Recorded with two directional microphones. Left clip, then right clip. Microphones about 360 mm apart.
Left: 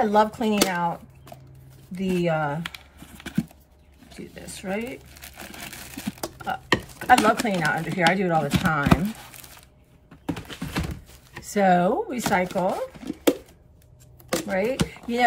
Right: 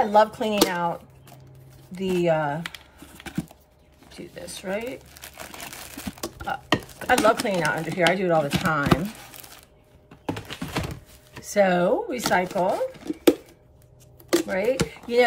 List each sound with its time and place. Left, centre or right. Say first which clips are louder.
0.0 s speech: right 1 dB; centre
1.9 s a sound: right 3 dB; centre
4.4 s speech: right 1 dB; centre
6.2 s speech: even; centre
10.2 s typing: right 1 dB; right
11.3 s speech: even; centre
14.4 s speech: right 1 dB; centre